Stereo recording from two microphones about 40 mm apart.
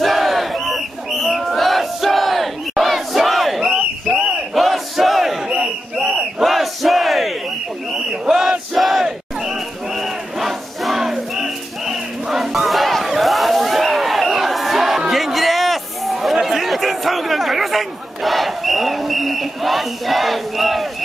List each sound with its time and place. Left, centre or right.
0.0 s battle cry: centre
5.5 s battle cry: centre
6.4 s battle cry: centre
8.3 s battle cry: centre
8.7 s battle cry: centre
9.0 s battle cry: centre